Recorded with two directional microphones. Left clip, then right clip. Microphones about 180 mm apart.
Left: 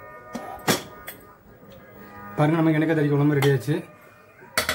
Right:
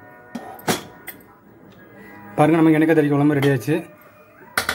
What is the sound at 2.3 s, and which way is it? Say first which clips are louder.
Speech: right 6 dB; 35° right (ahead or behind).